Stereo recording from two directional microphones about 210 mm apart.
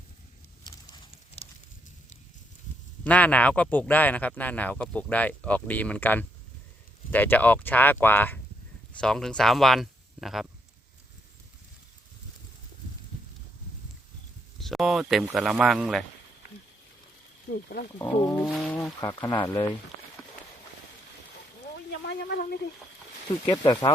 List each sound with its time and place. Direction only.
0.6 s a sound: 20° left (ahead or behind)
3.0 s speech: 5° left (ahead or behind)
14.6 s speech: centre (ahead or behind)
17.5 s speech: 50° left (ahead or behind)
18.0 s speech: 10° left (ahead or behind)
18.4 s speech: centre (ahead or behind)
22.0 s speech: 50° left (ahead or behind)
23.5 s speech: 20° left (ahead or behind)